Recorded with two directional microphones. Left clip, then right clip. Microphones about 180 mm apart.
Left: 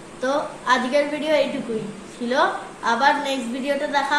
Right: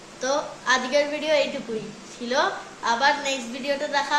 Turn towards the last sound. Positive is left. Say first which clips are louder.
# left 3 dB
turn(degrees=-15)  # may be behind; listen again after turning